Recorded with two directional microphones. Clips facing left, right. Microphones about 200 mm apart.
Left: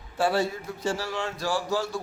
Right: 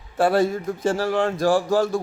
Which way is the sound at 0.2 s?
50° right (ahead or behind).